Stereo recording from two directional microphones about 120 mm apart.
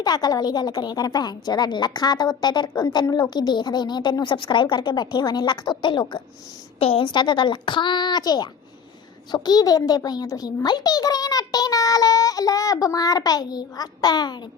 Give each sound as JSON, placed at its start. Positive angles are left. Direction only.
{"t": 0.0, "sound": "a woman's voice", "side_deg": 35}
{"t": 6.7, "sound": "a woman's voice", "side_deg": 55}